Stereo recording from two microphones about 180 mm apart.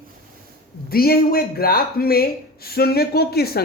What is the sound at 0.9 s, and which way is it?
Speech, 55° left (ahead or behind).